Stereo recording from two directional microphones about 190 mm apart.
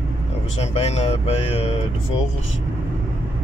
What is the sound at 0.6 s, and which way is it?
Speech, 35° left (ahead or behind).